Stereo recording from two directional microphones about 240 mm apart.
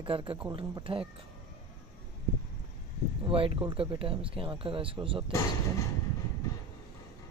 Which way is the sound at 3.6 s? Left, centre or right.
Right.